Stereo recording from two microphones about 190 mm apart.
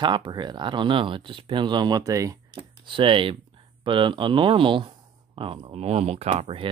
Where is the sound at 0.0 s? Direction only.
25° right (ahead or behind).